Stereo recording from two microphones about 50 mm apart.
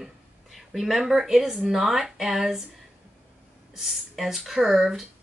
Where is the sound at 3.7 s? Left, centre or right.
Centre.